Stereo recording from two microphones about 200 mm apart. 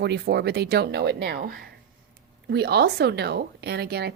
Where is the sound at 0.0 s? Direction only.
55° right (ahead or behind).